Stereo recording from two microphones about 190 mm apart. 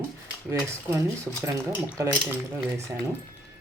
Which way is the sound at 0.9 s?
15° right (ahead or behind).